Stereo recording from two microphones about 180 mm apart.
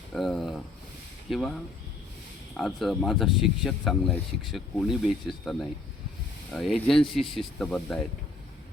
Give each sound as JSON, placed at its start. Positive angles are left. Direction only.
{"t": 0.1, "sound": "speech", "side_deg": 0}
{"t": 2.6, "sound": "speech", "side_deg": 0}